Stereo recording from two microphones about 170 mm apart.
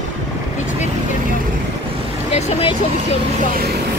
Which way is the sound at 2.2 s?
40° left (ahead or behind).